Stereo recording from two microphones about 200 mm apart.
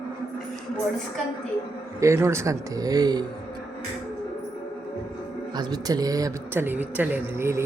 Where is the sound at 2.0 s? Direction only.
15° right (ahead or behind).